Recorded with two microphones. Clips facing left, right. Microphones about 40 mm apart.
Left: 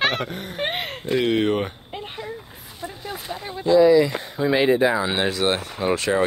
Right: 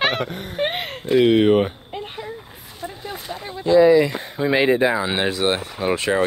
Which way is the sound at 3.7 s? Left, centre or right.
Right.